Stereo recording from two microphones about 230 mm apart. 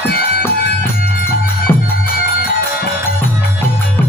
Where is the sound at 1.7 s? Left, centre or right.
Centre.